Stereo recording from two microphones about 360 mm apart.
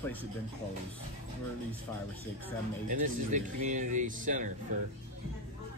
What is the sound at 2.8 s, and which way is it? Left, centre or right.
Speech, right.